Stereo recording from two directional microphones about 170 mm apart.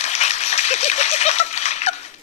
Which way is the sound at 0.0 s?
40° left (ahead or behind).